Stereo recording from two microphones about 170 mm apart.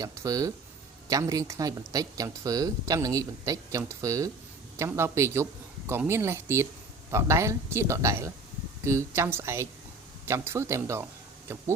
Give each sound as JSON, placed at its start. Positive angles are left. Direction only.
{"t": 0.0, "sound": "a woman's voice", "side_deg": -20}